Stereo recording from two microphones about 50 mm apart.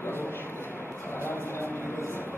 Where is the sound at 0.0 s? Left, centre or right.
Left.